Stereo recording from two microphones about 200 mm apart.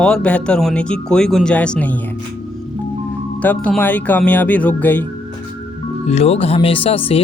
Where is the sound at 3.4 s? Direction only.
5° left (ahead or behind).